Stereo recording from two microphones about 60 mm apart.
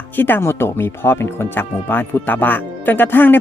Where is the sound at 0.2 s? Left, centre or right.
Left.